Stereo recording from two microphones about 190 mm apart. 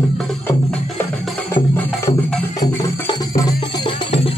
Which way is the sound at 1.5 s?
10° left (ahead or behind).